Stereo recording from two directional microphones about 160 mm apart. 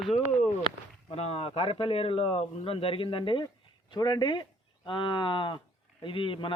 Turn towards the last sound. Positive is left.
turn(degrees=35)  # may be behind; listen again after turning